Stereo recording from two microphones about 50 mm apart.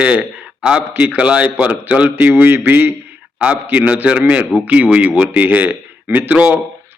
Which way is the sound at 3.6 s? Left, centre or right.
Right.